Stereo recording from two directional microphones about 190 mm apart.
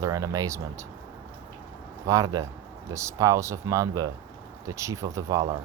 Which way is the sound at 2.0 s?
15° right (ahead or behind).